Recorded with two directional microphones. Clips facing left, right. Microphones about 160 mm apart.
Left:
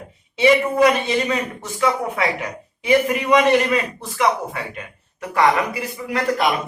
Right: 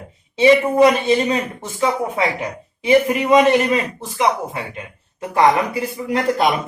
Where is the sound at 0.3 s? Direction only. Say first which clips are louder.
Right 3 dB; 30° right (ahead or behind).